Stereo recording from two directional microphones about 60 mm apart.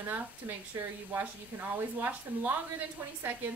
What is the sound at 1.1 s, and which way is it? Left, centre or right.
Speech, right.